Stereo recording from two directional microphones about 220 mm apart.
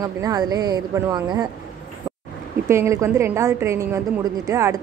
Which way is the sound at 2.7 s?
15° right (ahead or behind).